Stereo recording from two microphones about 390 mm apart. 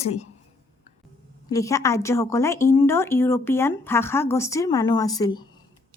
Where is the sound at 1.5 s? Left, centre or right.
Centre.